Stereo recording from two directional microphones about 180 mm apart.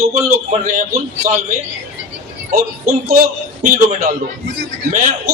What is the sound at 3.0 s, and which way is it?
A man's voice, 55° right (ahead or behind).